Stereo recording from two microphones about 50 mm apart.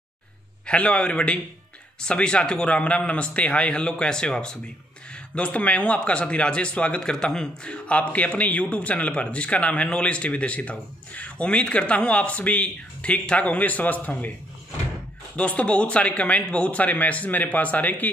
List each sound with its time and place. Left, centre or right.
0.7 s a man's voice: left
15.3 s a man's voice: left